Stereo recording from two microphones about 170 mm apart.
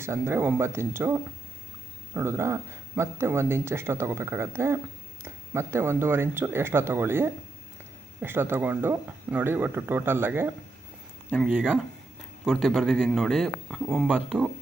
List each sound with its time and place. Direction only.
0.0 s speech: 15° right (ahead or behind)